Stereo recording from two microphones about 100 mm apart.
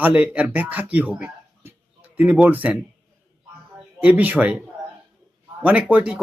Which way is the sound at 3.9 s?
15° right (ahead or behind).